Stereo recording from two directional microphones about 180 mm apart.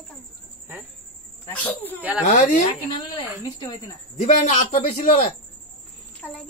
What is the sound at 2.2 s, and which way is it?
Speech, 45° left (ahead or behind).